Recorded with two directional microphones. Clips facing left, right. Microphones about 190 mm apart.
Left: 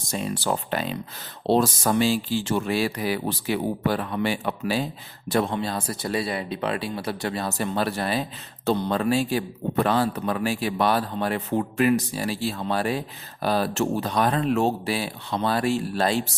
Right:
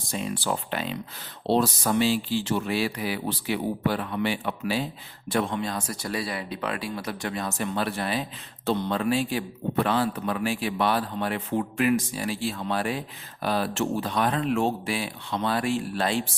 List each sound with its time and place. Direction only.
0.1 s speech: 40° left (ahead or behind)